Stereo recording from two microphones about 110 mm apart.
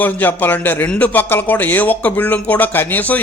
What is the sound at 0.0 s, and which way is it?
A man's voice, 15° left (ahead or behind).